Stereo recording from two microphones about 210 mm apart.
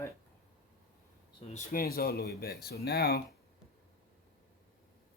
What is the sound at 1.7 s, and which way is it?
Speech, 45° left (ahead or behind).